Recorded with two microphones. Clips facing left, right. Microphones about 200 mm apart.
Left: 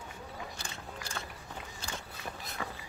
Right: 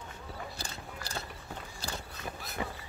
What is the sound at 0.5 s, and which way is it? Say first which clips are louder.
Biting: right 1 dB; 35° right (ahead or behind).